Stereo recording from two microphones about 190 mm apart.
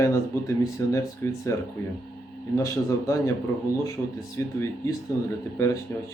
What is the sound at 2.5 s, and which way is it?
Speech, 15° left (ahead or behind).